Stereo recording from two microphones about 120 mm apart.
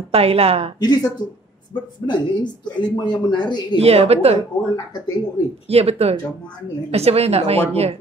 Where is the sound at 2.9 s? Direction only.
40° left (ahead or behind).